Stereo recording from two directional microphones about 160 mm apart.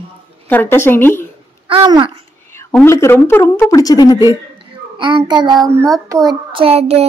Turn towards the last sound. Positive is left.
turn(degrees=-40)  # may be behind; listen again after turning